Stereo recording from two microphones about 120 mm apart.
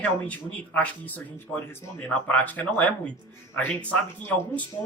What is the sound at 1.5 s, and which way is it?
Speech, centre (ahead or behind).